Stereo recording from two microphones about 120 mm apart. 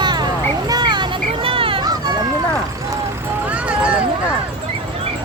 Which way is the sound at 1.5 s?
50° right (ahead or behind).